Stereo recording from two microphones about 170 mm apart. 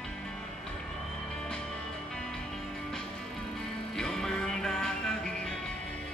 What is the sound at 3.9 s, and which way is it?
Music, 5° left (ahead or behind).